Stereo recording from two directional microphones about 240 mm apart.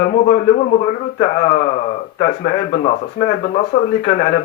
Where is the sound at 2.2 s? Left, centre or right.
Left.